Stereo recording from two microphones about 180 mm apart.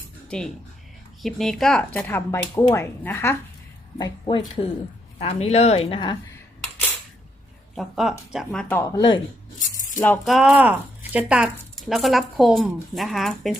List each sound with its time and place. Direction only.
0.3 s speech: 5° left (ahead or behind)
3.9 s speech: 25° left (ahead or behind)
7.8 s speech: centre (ahead or behind)
8.7 s speech: 20° left (ahead or behind)
10.2 s speech: 5° right (ahead or behind)